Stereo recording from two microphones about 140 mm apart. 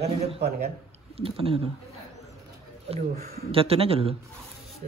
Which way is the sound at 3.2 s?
90° right.